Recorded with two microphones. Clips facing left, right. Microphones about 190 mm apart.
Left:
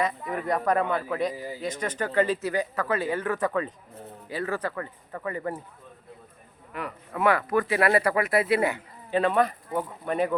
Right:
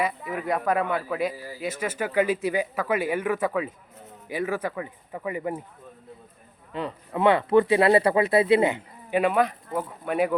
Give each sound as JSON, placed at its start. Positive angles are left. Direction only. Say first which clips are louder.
{"t": 0.0, "sound": "speech", "louder": "even", "side_deg": -5}
{"t": 1.3, "sound": "speech", "louder": "left 3 dB", "side_deg": 20}
{"t": 1.6, "sound": "speech", "louder": "right 2 dB", "side_deg": -5}
{"t": 6.7, "sound": "speech", "louder": "right 3 dB", "side_deg": -25}